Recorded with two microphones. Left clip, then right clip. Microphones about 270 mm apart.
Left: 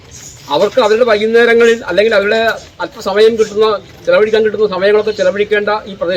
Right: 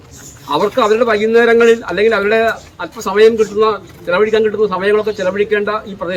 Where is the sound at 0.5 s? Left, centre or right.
Centre.